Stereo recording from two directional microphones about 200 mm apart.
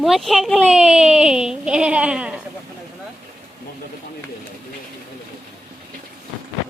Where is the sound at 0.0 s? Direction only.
Centre (ahead or behind).